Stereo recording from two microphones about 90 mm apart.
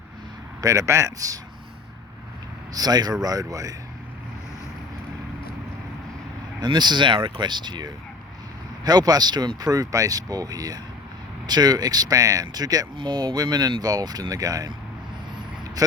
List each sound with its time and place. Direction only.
0.6 s a man's voice: 35° right (ahead or behind)
2.7 s speech: 45° right (ahead or behind)
6.6 s speech: 55° right (ahead or behind)
13.0 s speech: 55° right (ahead or behind); by 14.7 s 40° right (ahead or behind)